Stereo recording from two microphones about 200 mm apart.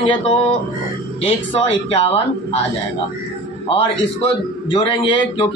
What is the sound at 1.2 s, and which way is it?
Speech, 30° left (ahead or behind).